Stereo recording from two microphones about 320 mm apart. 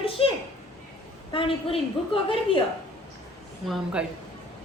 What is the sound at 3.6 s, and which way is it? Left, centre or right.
Speech, centre.